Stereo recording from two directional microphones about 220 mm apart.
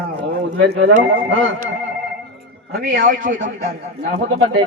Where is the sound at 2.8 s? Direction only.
40° right (ahead or behind).